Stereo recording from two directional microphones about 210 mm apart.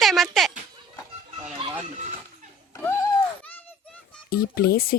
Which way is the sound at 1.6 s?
25° right (ahead or behind).